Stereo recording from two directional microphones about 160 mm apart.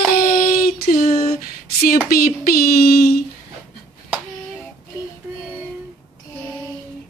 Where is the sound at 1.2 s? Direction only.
70° left (ahead or behind).